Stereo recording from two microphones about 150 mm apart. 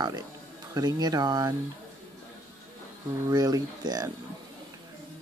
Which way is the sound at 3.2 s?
25° right (ahead or behind).